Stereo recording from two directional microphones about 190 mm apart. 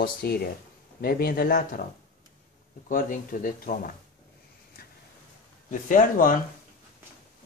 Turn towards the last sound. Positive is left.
turn(degrees=45)  # may be behind; listen again after turning